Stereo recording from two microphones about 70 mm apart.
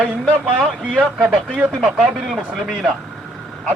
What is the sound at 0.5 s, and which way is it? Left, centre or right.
Speech, centre.